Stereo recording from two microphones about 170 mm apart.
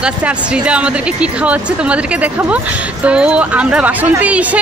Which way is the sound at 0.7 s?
5° right (ahead or behind).